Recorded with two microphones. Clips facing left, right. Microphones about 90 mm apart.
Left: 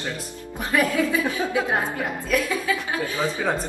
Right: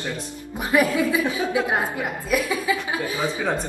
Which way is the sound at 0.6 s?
15° right (ahead or behind).